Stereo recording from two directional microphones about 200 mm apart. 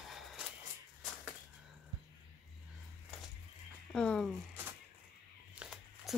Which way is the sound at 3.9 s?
5° left (ahead or behind).